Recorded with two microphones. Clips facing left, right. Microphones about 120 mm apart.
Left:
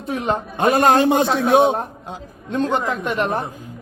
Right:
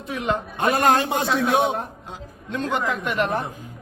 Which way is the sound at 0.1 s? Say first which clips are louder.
Left 3 dB; 35° left (ahead or behind).